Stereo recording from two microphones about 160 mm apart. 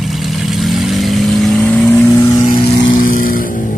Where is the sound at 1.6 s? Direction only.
10° left (ahead or behind).